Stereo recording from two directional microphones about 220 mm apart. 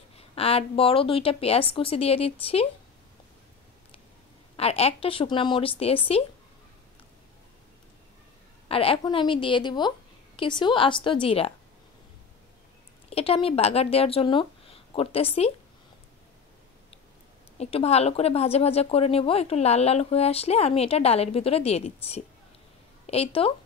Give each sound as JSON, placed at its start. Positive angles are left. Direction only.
{"t": 0.4, "sound": "a woman's voice", "side_deg": 25}
{"t": 4.6, "sound": "a woman's voice", "side_deg": 25}
{"t": 8.6, "sound": "a woman's voice", "side_deg": 25}
{"t": 13.1, "sound": "speech", "side_deg": 25}
{"t": 17.6, "sound": "a woman's voice", "side_deg": 25}